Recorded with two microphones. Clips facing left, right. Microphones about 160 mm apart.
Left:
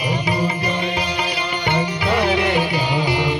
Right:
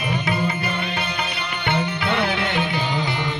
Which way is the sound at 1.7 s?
5° left (ahead or behind).